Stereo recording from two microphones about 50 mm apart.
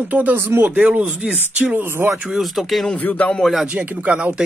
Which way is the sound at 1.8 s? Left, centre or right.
Right.